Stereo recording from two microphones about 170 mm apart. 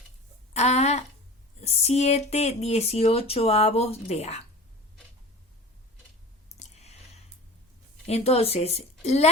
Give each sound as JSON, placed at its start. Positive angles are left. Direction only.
{"t": 0.5, "sound": "speech", "side_deg": 40}
{"t": 6.6, "sound": "a sound", "side_deg": 40}
{"t": 8.0, "sound": "speech", "side_deg": 40}